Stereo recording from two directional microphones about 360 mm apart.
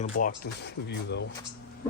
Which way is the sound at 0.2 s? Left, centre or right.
Left.